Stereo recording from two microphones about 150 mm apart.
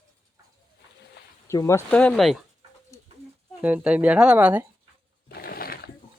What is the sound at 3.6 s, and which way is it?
Speech, 10° right (ahead or behind).